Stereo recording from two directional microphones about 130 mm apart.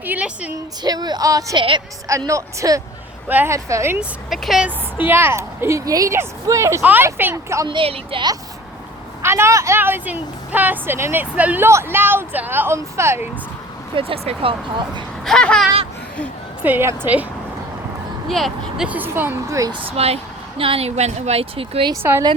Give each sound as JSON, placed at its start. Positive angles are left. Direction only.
{"t": 0.0, "sound": "a woman's voice", "side_deg": -10}
{"t": 0.8, "sound": "a woman's voice", "side_deg": -30}
{"t": 4.3, "sound": "speech", "side_deg": 0}
{"t": 5.0, "sound": "speech", "side_deg": -15}
{"t": 7.6, "sound": "a woman's voice", "side_deg": -40}
{"t": 9.2, "sound": "a woman's voice", "side_deg": -20}
{"t": 13.9, "sound": "speech", "side_deg": -45}
{"t": 15.2, "sound": "a sound", "side_deg": 5}
{"t": 16.6, "sound": "a woman's voice", "side_deg": -15}
{"t": 18.3, "sound": "speech", "side_deg": 0}
{"t": 18.9, "sound": "a woman's voice", "side_deg": -15}
{"t": 20.0, "sound": "speech", "side_deg": -50}